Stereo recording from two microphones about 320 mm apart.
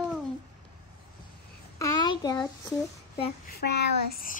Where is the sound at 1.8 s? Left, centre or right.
Centre.